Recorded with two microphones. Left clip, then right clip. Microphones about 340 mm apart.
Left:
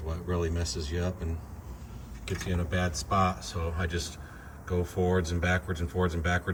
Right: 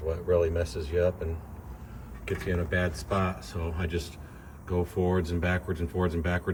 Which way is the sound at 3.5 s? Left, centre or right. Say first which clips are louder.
Even; centre.